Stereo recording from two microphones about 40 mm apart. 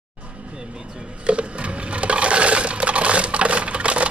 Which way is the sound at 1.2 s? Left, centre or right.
Right.